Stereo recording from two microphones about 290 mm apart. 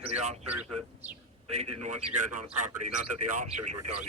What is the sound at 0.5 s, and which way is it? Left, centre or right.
Speech, right.